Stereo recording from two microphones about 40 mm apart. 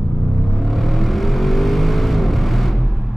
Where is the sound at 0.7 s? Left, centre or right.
Centre.